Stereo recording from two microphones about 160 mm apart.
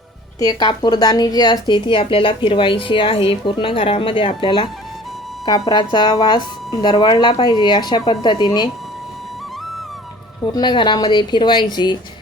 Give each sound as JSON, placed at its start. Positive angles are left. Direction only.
{"t": 0.3, "sound": "speech", "side_deg": 25}
{"t": 10.4, "sound": "speech", "side_deg": 25}